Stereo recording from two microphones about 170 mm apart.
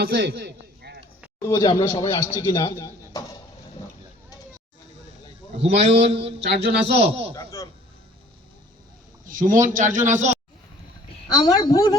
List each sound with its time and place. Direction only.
0.0 s a sound: 65° right (ahead or behind)
1.4 s speech: 25° left (ahead or behind)
5.5 s a man's voice: 40° right (ahead or behind)
6.4 s speech: 85° right
6.8 s a man's voice: 35° right (ahead or behind)
7.3 s speech: 20° left (ahead or behind)
9.3 s speech: 50° right (ahead or behind)
11.3 s speech: 20° left (ahead or behind)